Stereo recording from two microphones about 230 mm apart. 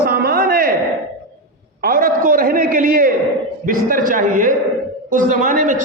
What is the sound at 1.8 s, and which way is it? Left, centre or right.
A man's voice, right.